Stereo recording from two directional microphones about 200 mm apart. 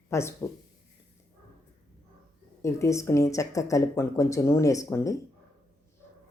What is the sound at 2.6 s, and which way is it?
Speech, 15° left (ahead or behind).